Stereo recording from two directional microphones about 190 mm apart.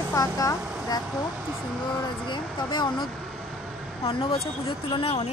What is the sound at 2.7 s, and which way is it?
Speech, 25° left (ahead or behind).